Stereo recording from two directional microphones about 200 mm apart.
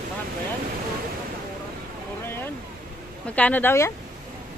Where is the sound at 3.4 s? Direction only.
10° left (ahead or behind).